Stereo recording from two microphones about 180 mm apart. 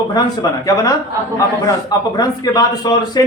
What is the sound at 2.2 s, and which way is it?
Speech, 20° left (ahead or behind).